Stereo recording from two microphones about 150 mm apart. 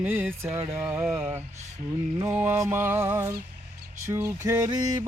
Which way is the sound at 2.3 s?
15° right (ahead or behind).